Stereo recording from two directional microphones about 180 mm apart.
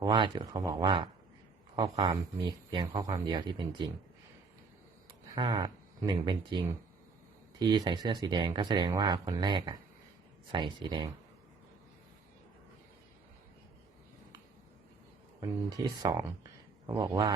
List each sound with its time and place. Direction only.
0.0 s speech: 25° right (ahead or behind)
5.3 s speech: 25° right (ahead or behind)
7.6 s speech: 25° right (ahead or behind)
15.4 s speech: 20° right (ahead or behind)